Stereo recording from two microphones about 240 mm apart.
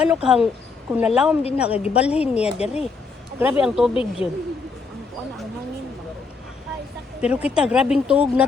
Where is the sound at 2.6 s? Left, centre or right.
Left.